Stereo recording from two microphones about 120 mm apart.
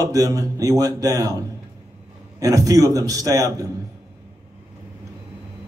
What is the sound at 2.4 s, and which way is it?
A man's voice, 30° right (ahead or behind).